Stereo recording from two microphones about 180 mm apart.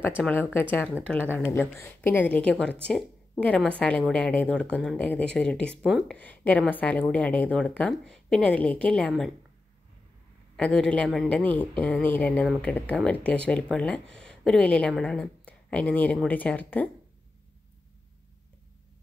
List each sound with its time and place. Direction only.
0.2 s speech: 10° left (ahead or behind)
10.5 s speech: 5° left (ahead or behind)